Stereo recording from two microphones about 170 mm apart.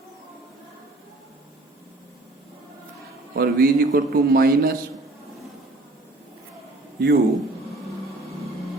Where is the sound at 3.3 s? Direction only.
60° right (ahead or behind).